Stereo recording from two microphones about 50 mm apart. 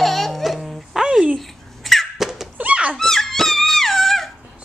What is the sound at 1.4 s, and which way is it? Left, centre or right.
Cat, centre.